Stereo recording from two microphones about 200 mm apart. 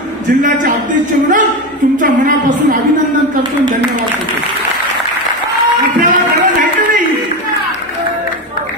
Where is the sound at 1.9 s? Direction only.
40° right (ahead or behind).